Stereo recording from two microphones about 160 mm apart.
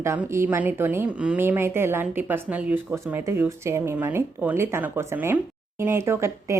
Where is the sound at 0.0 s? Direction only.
15° right (ahead or behind).